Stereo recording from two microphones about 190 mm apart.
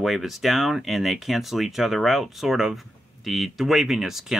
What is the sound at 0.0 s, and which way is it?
Speech, centre (ahead or behind).